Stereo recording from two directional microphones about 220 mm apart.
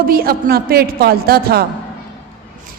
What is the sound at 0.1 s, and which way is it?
A woman's voice, 45° right (ahead or behind).